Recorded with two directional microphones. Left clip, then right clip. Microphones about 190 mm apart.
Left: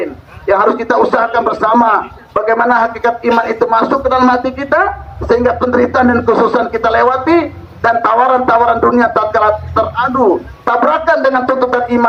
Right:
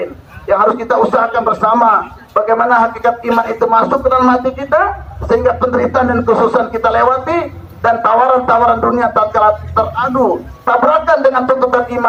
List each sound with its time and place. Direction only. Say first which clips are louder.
0.4 s speech: left 1 dB; 35° left (ahead or behind)